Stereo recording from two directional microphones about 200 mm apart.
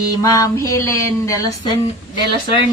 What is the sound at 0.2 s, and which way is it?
A woman's voice, 15° left (ahead or behind).